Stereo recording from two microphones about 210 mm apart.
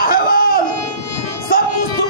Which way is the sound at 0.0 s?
45° left (ahead or behind).